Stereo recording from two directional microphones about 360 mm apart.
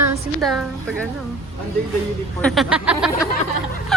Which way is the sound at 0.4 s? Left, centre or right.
Centre.